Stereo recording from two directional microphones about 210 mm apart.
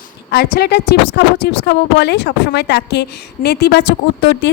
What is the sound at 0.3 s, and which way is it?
A woman's voice, 50° left (ahead or behind).